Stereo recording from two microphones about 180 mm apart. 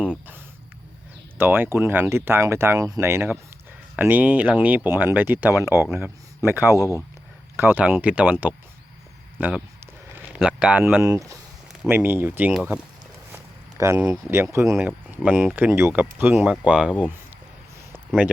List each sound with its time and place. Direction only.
1.4 s speech: 10° right (ahead or behind)
6.7 s speech: 20° left (ahead or behind)
7.5 s speech: 10° right (ahead or behind)
11.7 s speech: 5° right (ahead or behind)
13.3 s a sound: 15° right (ahead or behind)
14.1 s speech: 15° right (ahead or behind)